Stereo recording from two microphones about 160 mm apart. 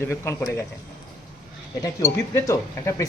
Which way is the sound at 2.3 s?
20° left (ahead or behind).